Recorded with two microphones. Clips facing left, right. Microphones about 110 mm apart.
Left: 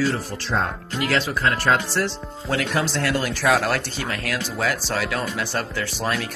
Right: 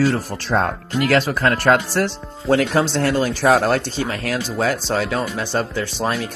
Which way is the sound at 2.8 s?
30° right (ahead or behind).